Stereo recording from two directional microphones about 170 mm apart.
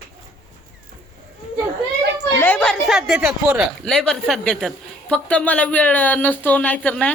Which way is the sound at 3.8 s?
5° left (ahead or behind).